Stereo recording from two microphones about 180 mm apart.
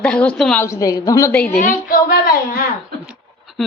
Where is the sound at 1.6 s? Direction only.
50° left (ahead or behind).